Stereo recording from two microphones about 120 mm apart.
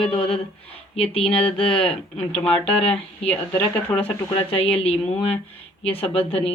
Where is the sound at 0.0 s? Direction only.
55° left (ahead or behind).